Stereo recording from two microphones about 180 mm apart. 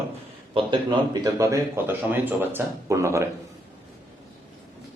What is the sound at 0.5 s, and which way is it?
A man's voice, 25° right (ahead or behind).